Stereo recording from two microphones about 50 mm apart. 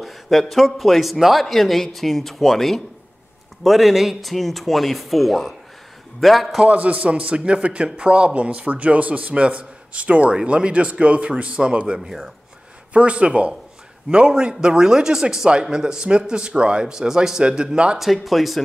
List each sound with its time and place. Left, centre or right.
0.0 s speech: centre
6.6 s a man's voice: right
17.9 s speech: centre